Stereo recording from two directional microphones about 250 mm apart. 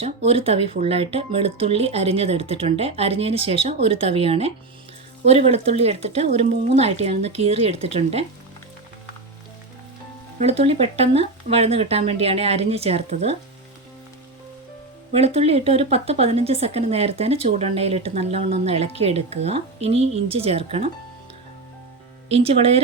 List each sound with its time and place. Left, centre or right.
0.0 s speech: right
10.4 s speech: right
15.1 s speech: right
22.4 s speech: right